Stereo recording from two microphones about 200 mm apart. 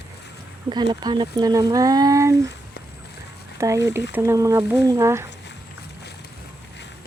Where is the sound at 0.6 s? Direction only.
25° right (ahead or behind).